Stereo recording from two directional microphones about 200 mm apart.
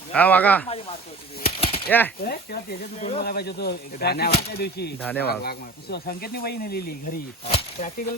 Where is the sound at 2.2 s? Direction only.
50° left (ahead or behind).